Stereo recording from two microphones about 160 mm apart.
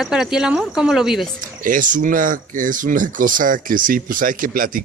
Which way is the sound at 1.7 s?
55° right (ahead or behind).